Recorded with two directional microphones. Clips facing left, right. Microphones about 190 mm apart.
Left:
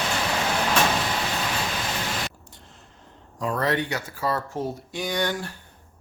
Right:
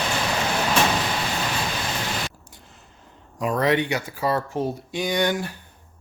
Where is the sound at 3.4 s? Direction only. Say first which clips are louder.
Right 4 dB; 15° right (ahead or behind).